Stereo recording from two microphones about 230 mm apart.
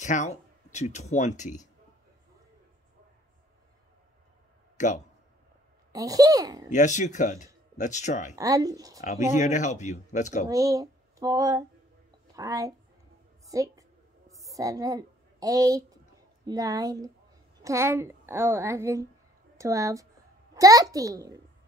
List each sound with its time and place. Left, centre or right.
0.0 s speech: left
4.7 s speech: left
5.9 s a woman's voice: centre
6.7 s speech: left
8.4 s a woman's voice: centre
9.0 s speech: left
10.5 s a woman's voice: centre
14.3 s a sound: centre
16.4 s a woman's voice: centre